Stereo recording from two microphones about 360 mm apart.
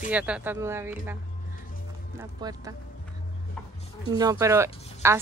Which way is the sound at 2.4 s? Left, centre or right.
Centre.